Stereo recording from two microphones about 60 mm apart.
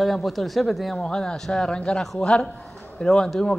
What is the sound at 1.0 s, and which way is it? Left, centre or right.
Speech, centre.